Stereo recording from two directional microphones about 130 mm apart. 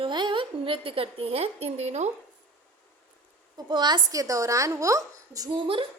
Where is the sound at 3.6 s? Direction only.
35° right (ahead or behind).